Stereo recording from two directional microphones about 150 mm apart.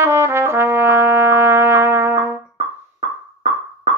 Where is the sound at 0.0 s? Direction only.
15° right (ahead or behind).